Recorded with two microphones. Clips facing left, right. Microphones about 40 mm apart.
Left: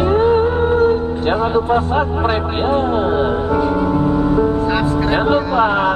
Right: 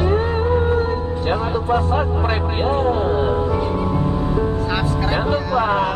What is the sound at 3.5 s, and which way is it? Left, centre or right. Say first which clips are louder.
Music: left 5 dB; left.